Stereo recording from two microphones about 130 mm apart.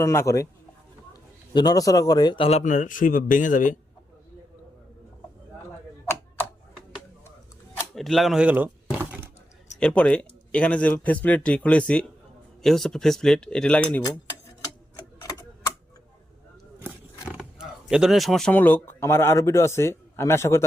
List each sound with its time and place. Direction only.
0.0 s speech: 20° left (ahead or behind)
1.5 s speech: 30° left (ahead or behind)
2.4 s speech: 50° left (ahead or behind)
2.6 s speech: 80° left
7.9 s speech: centre (ahead or behind)
9.8 s speech: 10° left (ahead or behind)
17.2 s wild animals: 5° right (ahead or behind)
18.5 s speech: 15° left (ahead or behind)